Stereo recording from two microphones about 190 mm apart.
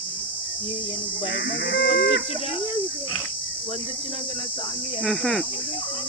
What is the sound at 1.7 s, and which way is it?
Chicken, 70° left (ahead or behind).